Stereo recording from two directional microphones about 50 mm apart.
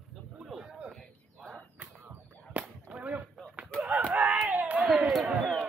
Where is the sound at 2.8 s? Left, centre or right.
Right.